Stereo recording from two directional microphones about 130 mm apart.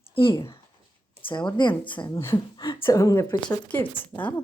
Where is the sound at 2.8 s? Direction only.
25° left (ahead or behind).